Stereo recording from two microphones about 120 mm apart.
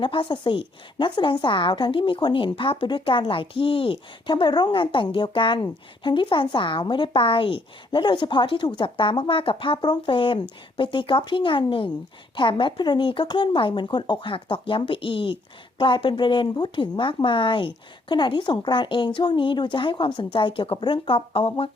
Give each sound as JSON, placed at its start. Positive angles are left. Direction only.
{"t": 0.0, "sound": "speech", "side_deg": 45}